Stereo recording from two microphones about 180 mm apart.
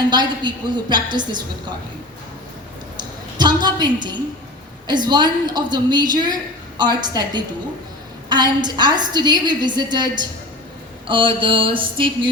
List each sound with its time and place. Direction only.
0.1 s a woman's voice: 25° right (ahead or behind)
3.0 s a sound: 25° right (ahead or behind)
4.9 s a woman's voice: 25° right (ahead or behind)